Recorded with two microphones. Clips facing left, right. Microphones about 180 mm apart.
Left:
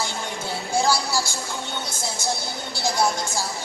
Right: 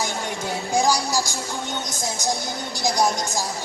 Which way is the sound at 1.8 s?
15° right (ahead or behind).